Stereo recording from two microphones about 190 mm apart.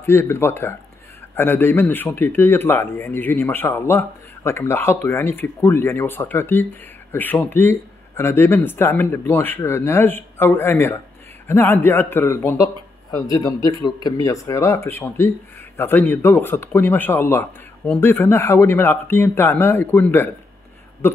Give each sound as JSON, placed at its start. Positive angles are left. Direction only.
{"t": 0.0, "sound": "a man's voice", "side_deg": 10}